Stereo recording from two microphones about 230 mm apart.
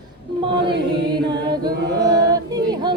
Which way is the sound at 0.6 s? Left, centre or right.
Right.